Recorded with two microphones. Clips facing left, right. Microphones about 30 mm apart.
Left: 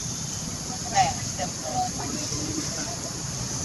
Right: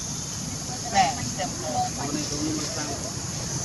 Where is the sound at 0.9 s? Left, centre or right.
Centre.